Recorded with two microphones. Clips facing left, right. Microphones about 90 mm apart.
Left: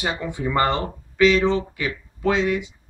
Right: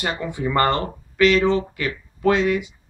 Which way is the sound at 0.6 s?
5° left (ahead or behind).